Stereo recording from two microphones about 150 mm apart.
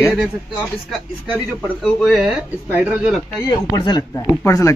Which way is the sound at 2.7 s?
10° right (ahead or behind).